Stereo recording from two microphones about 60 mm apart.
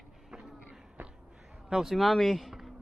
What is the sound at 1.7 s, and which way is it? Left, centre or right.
Speech, centre.